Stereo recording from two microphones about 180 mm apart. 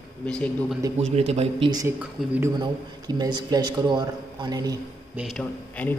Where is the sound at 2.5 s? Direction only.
25° right (ahead or behind).